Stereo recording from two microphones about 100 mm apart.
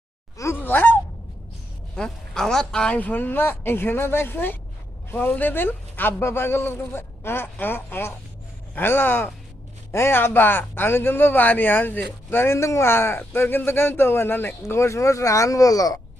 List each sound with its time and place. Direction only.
0.6 s honk: 20° left (ahead or behind)
2.0 s a man's voice: 5° left (ahead or behind); by 16.0 s 35° left (ahead or behind)